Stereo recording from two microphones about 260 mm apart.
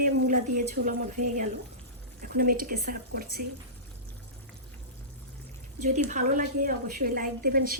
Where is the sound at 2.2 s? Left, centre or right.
Right.